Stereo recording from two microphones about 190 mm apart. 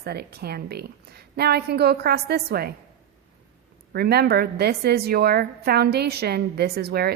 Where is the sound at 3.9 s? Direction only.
55° right (ahead or behind).